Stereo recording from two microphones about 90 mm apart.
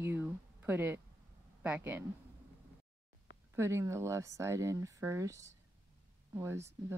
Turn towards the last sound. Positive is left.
turn(degrees=-30)  # may be behind; listen again after turning